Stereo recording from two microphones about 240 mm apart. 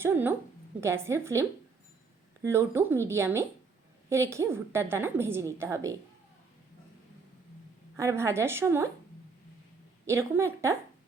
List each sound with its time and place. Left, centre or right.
0.0 s a woman's voice: centre
7.9 s a woman's voice: centre
10.1 s a woman's voice: centre